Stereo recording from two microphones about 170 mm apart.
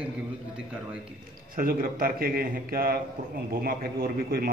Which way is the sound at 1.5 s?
55° right (ahead or behind).